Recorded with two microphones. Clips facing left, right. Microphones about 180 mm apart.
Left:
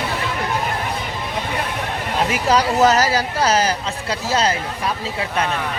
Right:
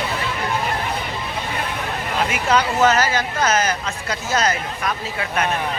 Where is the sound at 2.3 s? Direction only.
35° left (ahead or behind).